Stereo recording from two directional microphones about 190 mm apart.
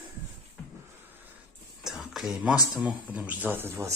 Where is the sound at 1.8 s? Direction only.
Centre (ahead or behind).